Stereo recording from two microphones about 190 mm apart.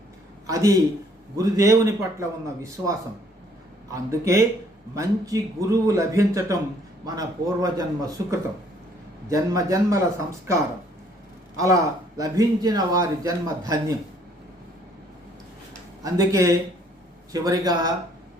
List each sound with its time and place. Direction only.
0.4 s speech: 15° right (ahead or behind)
3.9 s a man's voice: 15° right (ahead or behind)
16.0 s a man's voice: 15° right (ahead or behind)